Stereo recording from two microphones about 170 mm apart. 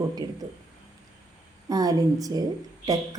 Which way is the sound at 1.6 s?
20° right (ahead or behind).